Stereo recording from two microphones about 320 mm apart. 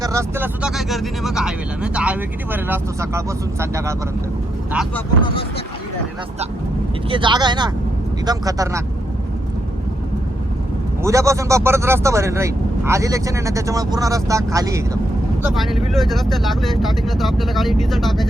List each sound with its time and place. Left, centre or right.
0.0 s speech: centre
5.2 s speech: centre
7.1 s speech: centre
11.0 s speech: centre